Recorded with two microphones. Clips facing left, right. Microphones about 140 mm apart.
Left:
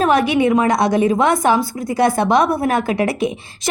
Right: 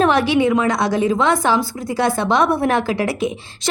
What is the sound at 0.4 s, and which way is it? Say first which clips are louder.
Speech: left 2 dB; 20° left (ahead or behind).